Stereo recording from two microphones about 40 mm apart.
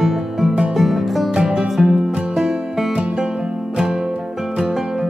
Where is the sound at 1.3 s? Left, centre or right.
Centre.